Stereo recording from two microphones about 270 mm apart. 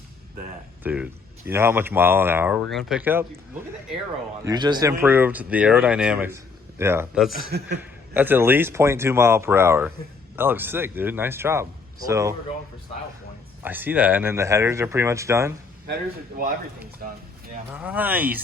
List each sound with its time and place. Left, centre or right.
0.8 s speech: centre
4.4 s speech: centre
7.3 s a man's voice: right
7.8 s speech: centre
13.6 s speech: centre
17.0 s a man's voice: right
17.7 s speech: centre